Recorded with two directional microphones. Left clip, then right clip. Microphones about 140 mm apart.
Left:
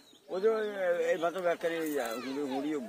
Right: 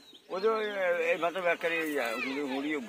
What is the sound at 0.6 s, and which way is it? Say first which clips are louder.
Speech: right 1 dB; 80° left.